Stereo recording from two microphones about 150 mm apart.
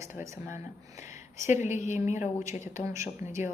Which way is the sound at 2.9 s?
20° right (ahead or behind).